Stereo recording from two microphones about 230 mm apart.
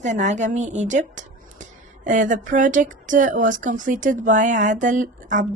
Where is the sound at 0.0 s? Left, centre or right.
Right.